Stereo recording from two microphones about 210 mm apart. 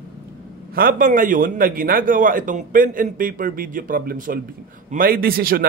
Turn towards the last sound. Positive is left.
turn(degrees=-45)  # may be behind; listen again after turning